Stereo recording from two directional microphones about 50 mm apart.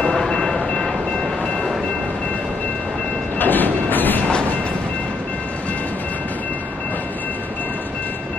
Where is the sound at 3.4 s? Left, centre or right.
Left.